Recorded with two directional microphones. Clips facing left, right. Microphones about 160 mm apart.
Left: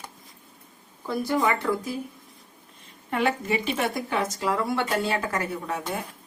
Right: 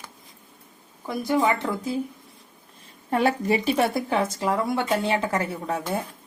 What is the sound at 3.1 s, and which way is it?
A woman's voice, 35° right (ahead or behind).